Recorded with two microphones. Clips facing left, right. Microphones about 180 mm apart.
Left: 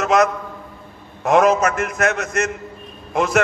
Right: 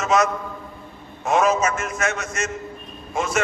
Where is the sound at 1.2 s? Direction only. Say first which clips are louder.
Left 5 dB; 65° left (ahead or behind).